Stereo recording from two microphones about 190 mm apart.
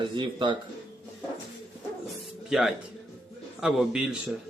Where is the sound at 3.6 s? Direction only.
5° right (ahead or behind).